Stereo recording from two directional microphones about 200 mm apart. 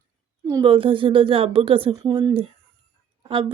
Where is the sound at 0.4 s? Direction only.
20° right (ahead or behind).